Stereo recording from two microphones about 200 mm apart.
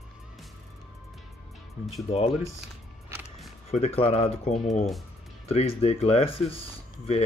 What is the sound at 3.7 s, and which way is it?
Speech, 30° left (ahead or behind).